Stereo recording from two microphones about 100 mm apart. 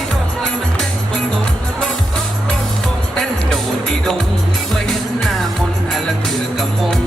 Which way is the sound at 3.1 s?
5° left (ahead or behind).